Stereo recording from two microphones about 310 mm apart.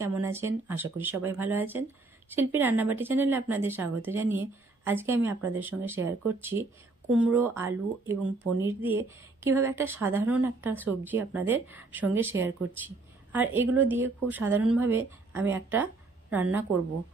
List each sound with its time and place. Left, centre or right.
0.0 s a woman's voice: centre